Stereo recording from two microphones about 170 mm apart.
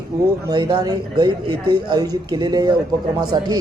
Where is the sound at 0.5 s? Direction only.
25° right (ahead or behind).